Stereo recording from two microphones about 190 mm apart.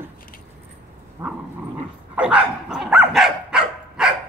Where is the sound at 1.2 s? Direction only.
10° right (ahead or behind).